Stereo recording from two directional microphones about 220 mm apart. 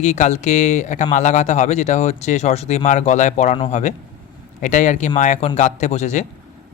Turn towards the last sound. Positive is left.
turn(degrees=30)  # may be behind; listen again after turning